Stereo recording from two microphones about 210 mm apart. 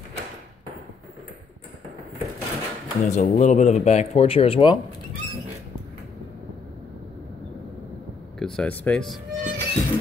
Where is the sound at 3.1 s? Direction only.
35° left (ahead or behind).